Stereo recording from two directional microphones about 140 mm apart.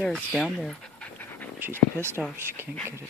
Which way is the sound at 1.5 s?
15° right (ahead or behind).